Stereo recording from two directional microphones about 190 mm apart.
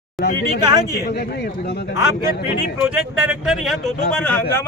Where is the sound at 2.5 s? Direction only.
55° left (ahead or behind).